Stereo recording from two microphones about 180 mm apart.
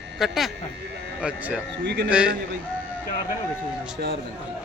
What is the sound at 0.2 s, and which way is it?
Speech, centre (ahead or behind).